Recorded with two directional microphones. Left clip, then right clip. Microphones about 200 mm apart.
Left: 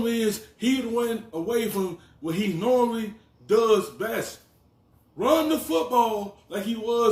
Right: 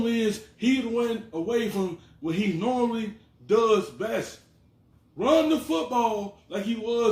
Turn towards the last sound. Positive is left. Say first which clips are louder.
# left 2 dB
turn(degrees=-5)  # may be behind; listen again after turning